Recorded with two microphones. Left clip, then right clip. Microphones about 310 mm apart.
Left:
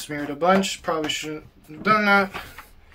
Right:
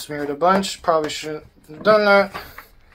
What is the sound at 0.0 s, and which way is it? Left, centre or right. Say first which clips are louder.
Speech: right 4 dB; centre.